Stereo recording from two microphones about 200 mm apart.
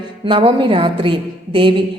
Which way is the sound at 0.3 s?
25° right (ahead or behind).